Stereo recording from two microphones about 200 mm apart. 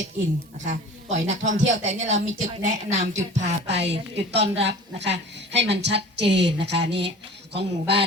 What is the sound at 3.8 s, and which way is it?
A woman's voice, 60° right (ahead or behind).